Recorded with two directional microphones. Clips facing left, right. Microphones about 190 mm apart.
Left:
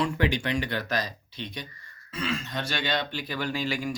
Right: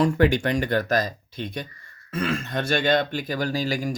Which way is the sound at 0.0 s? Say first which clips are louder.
Right 7 dB; 45° right (ahead or behind).